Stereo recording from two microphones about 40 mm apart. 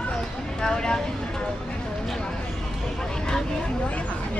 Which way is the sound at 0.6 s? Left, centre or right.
Centre.